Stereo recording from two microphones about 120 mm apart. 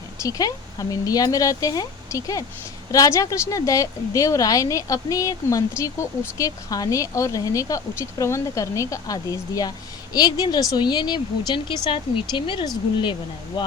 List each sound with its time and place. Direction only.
0.2 s a woman's voice: 30° left (ahead or behind)